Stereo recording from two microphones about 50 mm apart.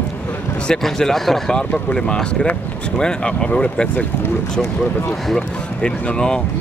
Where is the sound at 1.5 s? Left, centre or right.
Centre.